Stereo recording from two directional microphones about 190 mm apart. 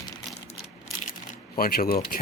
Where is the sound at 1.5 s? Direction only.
50° left (ahead or behind).